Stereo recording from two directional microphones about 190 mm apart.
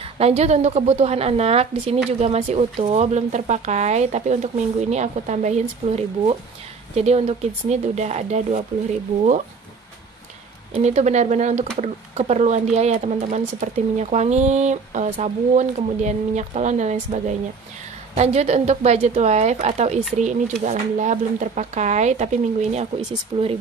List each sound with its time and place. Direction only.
0.2 s speech: 35° right (ahead or behind)
10.7 s speech: 35° right (ahead or behind)